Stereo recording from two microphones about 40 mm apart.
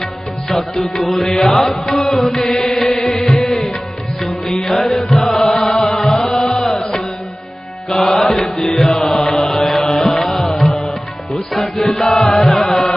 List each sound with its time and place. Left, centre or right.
0.0 s music: centre
7.9 s mantra: centre
10.0 s music: centre